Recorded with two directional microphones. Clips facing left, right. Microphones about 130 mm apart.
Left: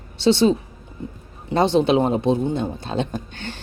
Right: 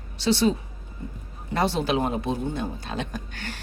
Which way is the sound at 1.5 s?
25° left (ahead or behind).